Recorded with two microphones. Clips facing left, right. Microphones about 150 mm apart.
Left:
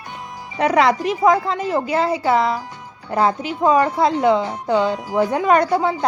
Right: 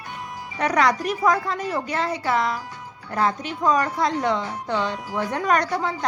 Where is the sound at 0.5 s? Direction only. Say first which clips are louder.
Left 5 dB; 25° left (ahead or behind).